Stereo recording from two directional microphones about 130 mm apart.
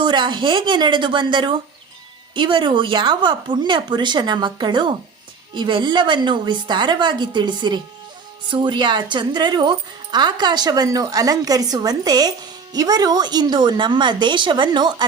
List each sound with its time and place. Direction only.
0.0 s speech: 35° right (ahead or behind)